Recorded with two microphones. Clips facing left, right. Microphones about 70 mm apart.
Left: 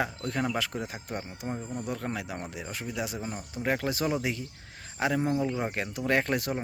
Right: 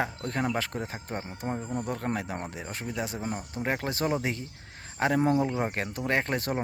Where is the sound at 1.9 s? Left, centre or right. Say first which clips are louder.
Right 1 dB; right.